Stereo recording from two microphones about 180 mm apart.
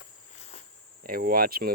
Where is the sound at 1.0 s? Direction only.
55° right (ahead or behind).